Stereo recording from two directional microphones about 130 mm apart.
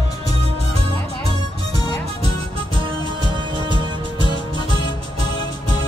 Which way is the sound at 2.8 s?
40° right (ahead or behind).